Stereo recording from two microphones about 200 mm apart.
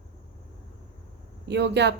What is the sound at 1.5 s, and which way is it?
Speech, 60° right (ahead or behind).